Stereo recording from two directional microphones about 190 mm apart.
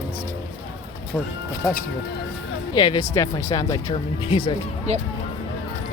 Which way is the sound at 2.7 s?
25° left (ahead or behind).